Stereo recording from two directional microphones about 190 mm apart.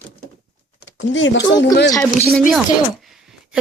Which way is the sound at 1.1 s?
75° left (ahead or behind).